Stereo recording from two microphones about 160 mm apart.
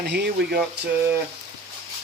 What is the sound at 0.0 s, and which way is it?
Speech, 90° right.